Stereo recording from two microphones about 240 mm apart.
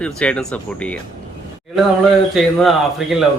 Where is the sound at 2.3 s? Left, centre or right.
Centre.